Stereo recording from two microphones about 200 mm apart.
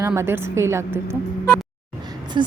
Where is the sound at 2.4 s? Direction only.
20° right (ahead or behind).